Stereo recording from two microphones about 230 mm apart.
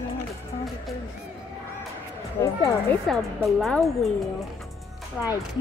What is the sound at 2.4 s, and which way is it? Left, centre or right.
Speech, centre.